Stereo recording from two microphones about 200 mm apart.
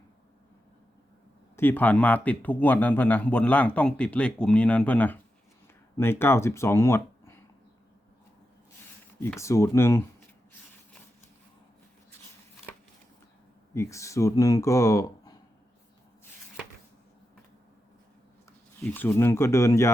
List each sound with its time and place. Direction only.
1.5 s speech: 10° left (ahead or behind)
9.4 s speech: 15° left (ahead or behind)
13.7 s speech: 15° left (ahead or behind)
18.8 s speech: 10° left (ahead or behind)